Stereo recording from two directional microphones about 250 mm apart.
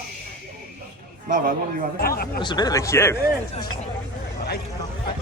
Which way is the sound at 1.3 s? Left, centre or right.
Right.